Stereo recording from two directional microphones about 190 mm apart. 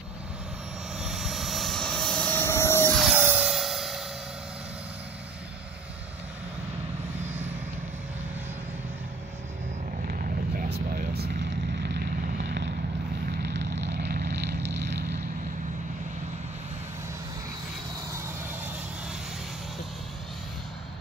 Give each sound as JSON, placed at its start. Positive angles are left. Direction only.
{"t": 0.9, "sound": "vehicle", "side_deg": 0}
{"t": 3.2, "sound": "music", "side_deg": -10}
{"t": 10.0, "sound": "vehicle", "side_deg": -45}